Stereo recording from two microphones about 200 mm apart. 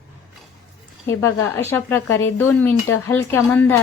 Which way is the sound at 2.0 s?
75° left (ahead or behind).